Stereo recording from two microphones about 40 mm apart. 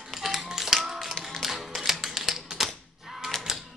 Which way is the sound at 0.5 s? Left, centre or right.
Centre.